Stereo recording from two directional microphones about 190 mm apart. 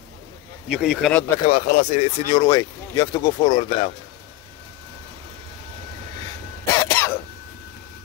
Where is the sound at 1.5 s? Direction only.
40° left (ahead or behind).